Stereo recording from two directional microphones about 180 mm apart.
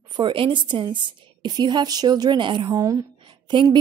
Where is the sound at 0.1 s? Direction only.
25° right (ahead or behind).